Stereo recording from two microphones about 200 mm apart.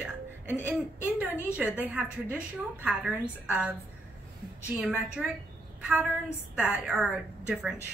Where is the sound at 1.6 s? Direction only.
5° right (ahead or behind).